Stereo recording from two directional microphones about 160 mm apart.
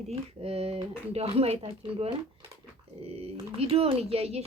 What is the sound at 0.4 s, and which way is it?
Speech, 35° right (ahead or behind).